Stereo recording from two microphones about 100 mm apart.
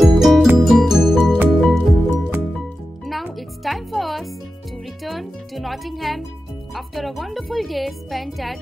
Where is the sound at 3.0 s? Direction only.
Centre (ahead or behind).